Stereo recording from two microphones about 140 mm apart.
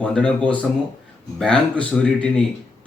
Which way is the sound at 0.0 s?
5° left (ahead or behind).